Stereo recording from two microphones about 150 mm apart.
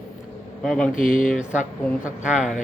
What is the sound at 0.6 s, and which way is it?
Speech, 5° left (ahead or behind).